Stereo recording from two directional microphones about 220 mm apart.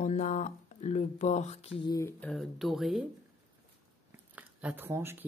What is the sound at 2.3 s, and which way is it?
Speech, centre (ahead or behind).